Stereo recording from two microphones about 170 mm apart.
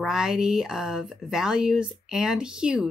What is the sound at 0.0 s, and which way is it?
Speech, 5° right (ahead or behind).